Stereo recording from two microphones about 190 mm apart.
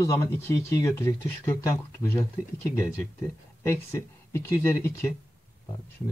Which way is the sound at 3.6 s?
15° left (ahead or behind).